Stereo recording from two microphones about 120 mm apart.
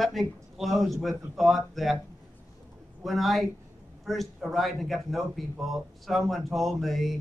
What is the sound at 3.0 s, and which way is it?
A man's voice, centre (ahead or behind).